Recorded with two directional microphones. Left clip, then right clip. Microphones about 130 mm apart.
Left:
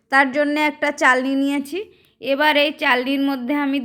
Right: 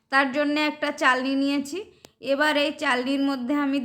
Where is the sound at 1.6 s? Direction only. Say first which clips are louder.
Left 6 dB; 15° left (ahead or behind).